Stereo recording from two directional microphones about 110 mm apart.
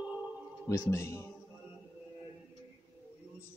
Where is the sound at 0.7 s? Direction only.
25° left (ahead or behind).